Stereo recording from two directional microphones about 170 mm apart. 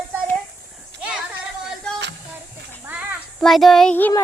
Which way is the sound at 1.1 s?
5° right (ahead or behind).